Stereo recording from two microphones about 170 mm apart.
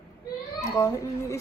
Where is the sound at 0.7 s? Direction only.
15° left (ahead or behind).